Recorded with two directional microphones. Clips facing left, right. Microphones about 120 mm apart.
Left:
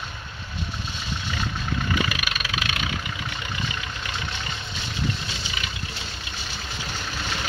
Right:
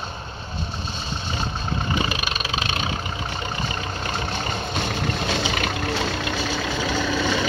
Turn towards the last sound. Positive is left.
turn(degrees=-90)